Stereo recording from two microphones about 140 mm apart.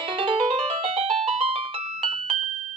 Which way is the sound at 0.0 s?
40° right (ahead or behind).